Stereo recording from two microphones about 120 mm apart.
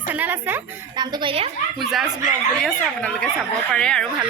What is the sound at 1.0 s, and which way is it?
Speech, 40° right (ahead or behind).